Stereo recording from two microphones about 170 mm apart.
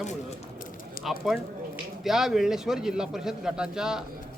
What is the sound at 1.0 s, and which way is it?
Speech, centre (ahead or behind).